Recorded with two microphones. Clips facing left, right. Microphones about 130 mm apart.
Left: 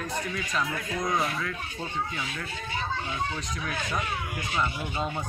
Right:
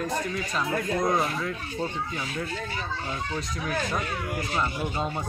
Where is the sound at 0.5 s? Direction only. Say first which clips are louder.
Right 4 dB; 35° right (ahead or behind).